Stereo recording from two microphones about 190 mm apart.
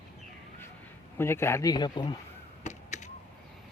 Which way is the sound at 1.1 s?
15° left (ahead or behind).